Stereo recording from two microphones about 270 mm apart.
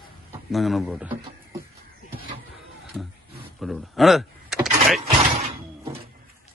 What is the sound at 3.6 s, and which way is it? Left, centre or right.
Speech, centre.